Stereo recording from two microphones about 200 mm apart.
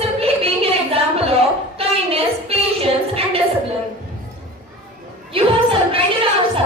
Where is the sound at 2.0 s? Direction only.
30° right (ahead or behind).